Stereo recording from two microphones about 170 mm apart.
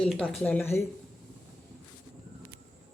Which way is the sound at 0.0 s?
Centre (ahead or behind).